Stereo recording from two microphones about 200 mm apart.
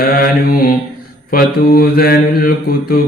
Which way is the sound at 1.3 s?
50° left (ahead or behind).